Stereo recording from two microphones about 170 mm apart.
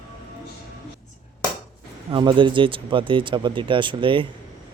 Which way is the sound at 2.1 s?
25° right (ahead or behind).